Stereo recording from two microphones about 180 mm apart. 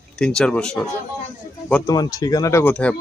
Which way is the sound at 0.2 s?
5° left (ahead or behind).